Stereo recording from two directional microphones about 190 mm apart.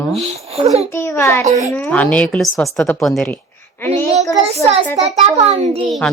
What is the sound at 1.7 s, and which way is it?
A woman's voice, 10° left (ahead or behind).